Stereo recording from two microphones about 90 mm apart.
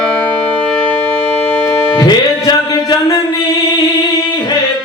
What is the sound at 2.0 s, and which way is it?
Music, 50° left (ahead or behind).